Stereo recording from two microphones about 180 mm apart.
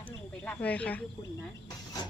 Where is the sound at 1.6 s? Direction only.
20° left (ahead or behind).